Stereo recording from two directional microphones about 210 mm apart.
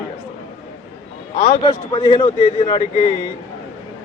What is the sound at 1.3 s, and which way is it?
A man's voice, 30° left (ahead or behind).